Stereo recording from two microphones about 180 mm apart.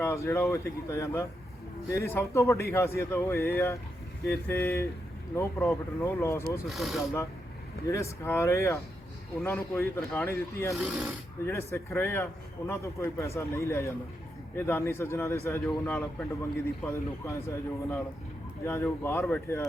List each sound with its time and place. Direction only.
0.0 s a man's voice: 15° left (ahead or behind)
6.7 s speech: centre (ahead or behind)
7.0 s a man's voice: 15° left (ahead or behind)
10.8 s speech: centre (ahead or behind)
11.4 s a man's voice: 15° left (ahead or behind)
18.6 s a man's voice: 15° left (ahead or behind)